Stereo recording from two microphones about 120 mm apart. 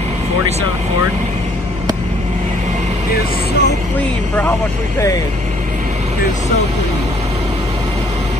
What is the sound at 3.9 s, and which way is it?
Speech, 15° left (ahead or behind).